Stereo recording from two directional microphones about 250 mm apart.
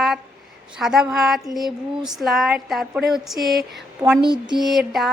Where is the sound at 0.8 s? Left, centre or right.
Centre.